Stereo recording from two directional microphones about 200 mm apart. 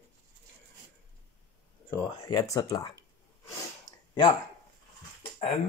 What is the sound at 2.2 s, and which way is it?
Speech, 15° left (ahead or behind).